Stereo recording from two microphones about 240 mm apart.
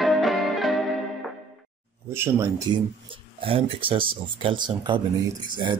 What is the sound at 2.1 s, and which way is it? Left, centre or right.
Speech, centre.